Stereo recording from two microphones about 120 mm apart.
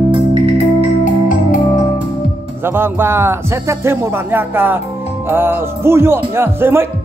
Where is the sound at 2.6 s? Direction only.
20° right (ahead or behind).